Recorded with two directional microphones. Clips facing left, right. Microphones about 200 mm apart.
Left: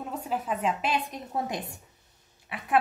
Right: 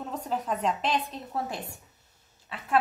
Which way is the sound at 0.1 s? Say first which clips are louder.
Even; 5° left (ahead or behind).